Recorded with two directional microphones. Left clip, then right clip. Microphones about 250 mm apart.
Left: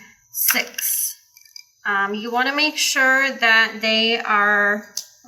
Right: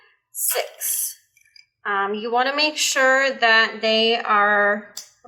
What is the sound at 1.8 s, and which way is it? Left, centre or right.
Speech, right.